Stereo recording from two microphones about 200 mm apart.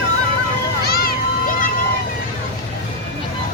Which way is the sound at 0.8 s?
50° left (ahead or behind).